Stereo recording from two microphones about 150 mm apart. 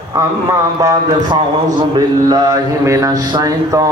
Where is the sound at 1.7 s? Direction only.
25° right (ahead or behind).